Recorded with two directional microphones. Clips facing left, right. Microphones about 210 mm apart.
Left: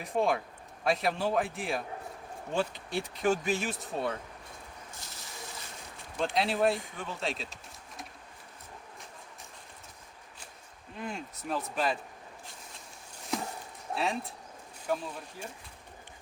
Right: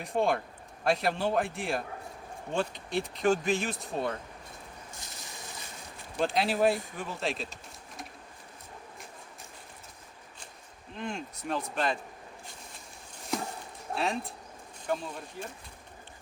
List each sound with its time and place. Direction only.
0.0 s speech: centre (ahead or behind)
4.9 s a sound: 15° right (ahead or behind)
6.1 s speech: centre (ahead or behind)
10.9 s speech: 5° left (ahead or behind)
13.9 s speech: centre (ahead or behind)